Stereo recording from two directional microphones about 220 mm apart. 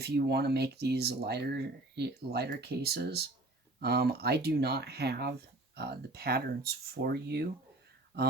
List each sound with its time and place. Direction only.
0.0 s speech: 45° right (ahead or behind)